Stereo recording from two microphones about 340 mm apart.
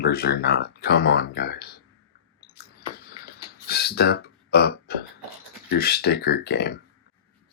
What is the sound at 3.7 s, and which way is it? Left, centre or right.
Burping, left.